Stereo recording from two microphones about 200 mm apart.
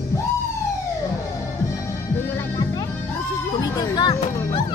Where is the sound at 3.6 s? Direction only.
20° left (ahead or behind).